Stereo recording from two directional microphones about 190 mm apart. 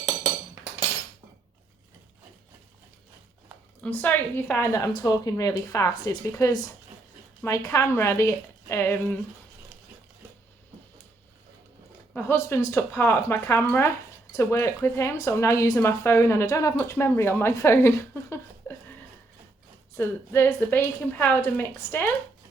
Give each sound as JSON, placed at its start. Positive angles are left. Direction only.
{"t": 3.8, "sound": "speech", "side_deg": 10}
{"t": 12.1, "sound": "speech", "side_deg": 15}
{"t": 18.6, "sound": "a sound", "side_deg": 15}
{"t": 20.0, "sound": "speech", "side_deg": 10}